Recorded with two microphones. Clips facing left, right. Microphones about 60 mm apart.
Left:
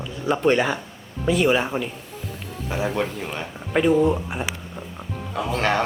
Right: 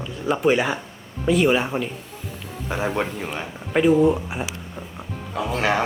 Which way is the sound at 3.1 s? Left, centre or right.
Centre.